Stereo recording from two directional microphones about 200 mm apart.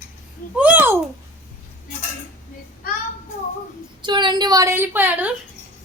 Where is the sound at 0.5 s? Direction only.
5° right (ahead or behind).